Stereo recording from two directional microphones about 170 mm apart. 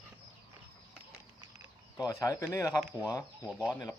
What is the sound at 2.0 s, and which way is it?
Speech, 20° left (ahead or behind).